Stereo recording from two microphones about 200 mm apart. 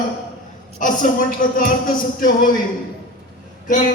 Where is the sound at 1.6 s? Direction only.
45° left (ahead or behind).